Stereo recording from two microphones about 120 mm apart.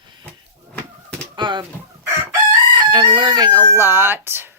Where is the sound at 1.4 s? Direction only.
40° right (ahead or behind).